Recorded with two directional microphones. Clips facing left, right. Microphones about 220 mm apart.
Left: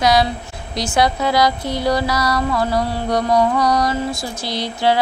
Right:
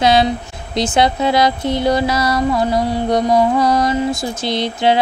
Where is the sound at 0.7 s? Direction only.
25° right (ahead or behind).